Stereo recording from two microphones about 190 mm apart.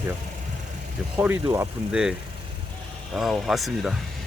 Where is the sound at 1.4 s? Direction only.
15° right (ahead or behind).